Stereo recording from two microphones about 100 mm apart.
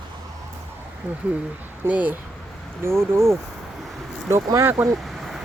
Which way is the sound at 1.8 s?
15° right (ahead or behind).